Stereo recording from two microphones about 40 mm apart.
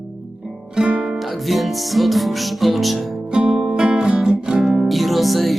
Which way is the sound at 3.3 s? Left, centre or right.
Centre.